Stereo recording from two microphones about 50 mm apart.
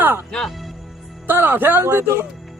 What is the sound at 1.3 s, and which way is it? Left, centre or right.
Speech, right.